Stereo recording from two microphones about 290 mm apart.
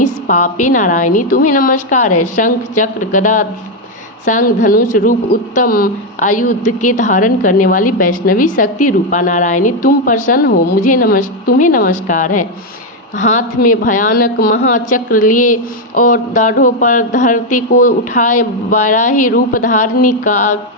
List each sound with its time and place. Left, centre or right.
0.3 s speech: left